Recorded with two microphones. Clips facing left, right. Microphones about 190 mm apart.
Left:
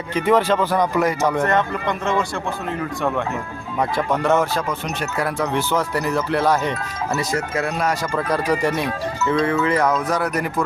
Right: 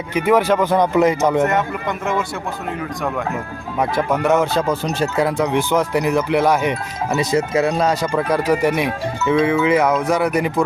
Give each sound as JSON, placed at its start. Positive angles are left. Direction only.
{"t": 0.1, "sound": "speech", "side_deg": -10}
{"t": 1.5, "sound": "speech", "side_deg": -5}
{"t": 4.1, "sound": "speech", "side_deg": -15}
{"t": 4.7, "sound": "speech", "side_deg": -25}
{"t": 8.1, "sound": "speech", "side_deg": -15}